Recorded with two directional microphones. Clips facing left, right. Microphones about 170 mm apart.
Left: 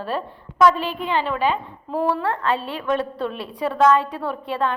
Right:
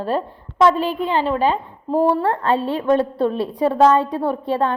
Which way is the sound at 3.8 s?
30° right (ahead or behind).